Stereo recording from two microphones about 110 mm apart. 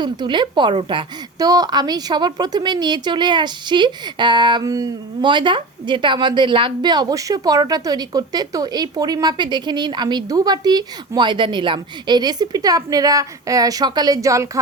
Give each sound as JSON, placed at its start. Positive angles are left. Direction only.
{"t": 0.0, "sound": "a woman's voice", "side_deg": -45}
{"t": 1.4, "sound": "a woman's voice", "side_deg": -35}
{"t": 4.6, "sound": "a woman's voice", "side_deg": -30}
{"t": 5.2, "sound": "a woman's voice", "side_deg": -45}